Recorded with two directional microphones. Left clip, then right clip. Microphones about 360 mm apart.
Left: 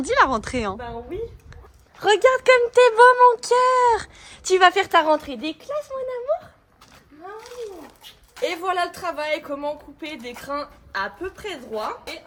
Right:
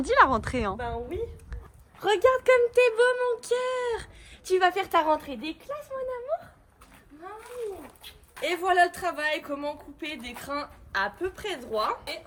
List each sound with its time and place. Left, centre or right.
0.0 s a woman's voice: centre
2.0 s speech: left
8.4 s a woman's voice: centre